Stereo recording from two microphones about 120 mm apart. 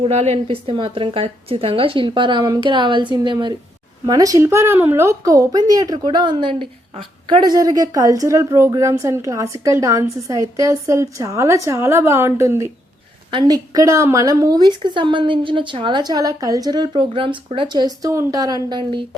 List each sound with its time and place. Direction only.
0.0 s a woman's voice: 65° right (ahead or behind); by 3.3 s 40° right (ahead or behind)
4.0 s a woman's voice: 30° right (ahead or behind)
14.8 s a woman's voice: 40° right (ahead or behind)